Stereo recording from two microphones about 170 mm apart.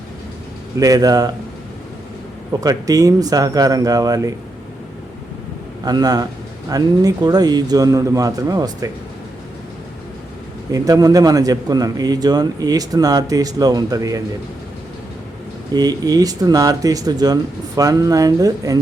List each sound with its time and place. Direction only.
0.8 s a man's voice: 20° right (ahead or behind)
2.5 s a man's voice: 20° right (ahead or behind)
5.8 s a man's voice: 25° right (ahead or behind)
10.7 s a man's voice: 20° right (ahead or behind)
15.7 s a man's voice: 20° right (ahead or behind)